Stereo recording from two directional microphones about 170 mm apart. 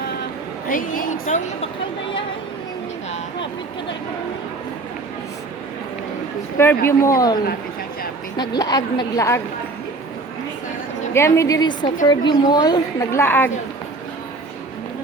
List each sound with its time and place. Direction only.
0.7 s a woman's voice: 55° left (ahead or behind)
6.6 s speech: 15° left (ahead or behind)
8.4 s a woman's voice: 25° left (ahead or behind)
11.1 s a woman's voice: 15° left (ahead or behind)